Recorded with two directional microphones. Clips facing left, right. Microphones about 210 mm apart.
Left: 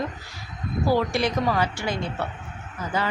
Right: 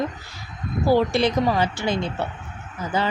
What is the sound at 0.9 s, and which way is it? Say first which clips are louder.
Speech: right 5 dB; 25° right (ahead or behind).